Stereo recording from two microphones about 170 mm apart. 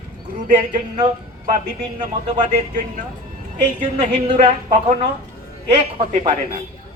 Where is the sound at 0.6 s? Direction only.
45° right (ahead or behind).